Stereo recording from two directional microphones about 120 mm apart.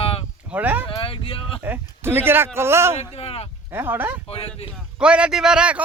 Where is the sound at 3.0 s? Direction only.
55° left (ahead or behind).